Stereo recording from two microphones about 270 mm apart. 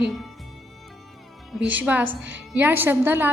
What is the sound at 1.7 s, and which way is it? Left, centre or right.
A woman's voice, centre.